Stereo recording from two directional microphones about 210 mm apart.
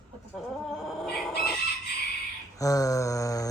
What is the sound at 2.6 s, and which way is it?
Speech, 15° left (ahead or behind).